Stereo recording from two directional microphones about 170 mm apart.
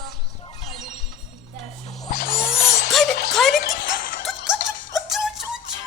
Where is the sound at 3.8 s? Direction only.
55° left (ahead or behind).